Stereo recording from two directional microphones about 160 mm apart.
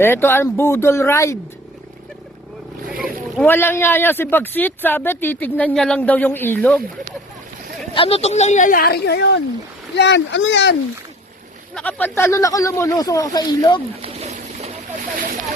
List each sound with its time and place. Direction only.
0.0 s speech: 15° left (ahead or behind)
3.4 s speech: 15° left (ahead or behind)
7.9 s speech: 35° left (ahead or behind); by 10.8 s 90° left
11.7 s speech: 10° left (ahead or behind); by 13.8 s 25° left (ahead or behind)
14.0 s a sound: 45° right (ahead or behind)